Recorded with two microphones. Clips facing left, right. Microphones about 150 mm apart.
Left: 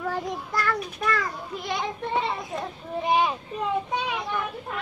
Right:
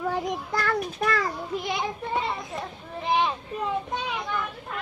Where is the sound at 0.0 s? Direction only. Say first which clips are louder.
Right 2 dB; 15° right (ahead or behind).